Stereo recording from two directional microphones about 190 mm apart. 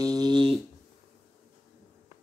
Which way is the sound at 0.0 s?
20° right (ahead or behind).